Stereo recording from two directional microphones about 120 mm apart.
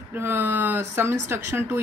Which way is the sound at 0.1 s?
15° right (ahead or behind).